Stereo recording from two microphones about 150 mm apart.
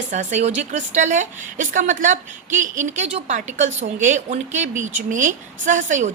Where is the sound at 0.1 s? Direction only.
55° right (ahead or behind).